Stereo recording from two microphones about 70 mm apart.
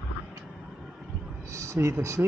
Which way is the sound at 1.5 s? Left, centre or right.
Right.